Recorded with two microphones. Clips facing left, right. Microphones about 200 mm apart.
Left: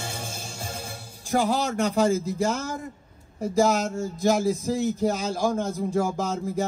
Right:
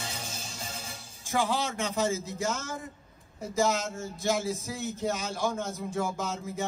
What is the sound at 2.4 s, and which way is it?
Speech, 35° left (ahead or behind).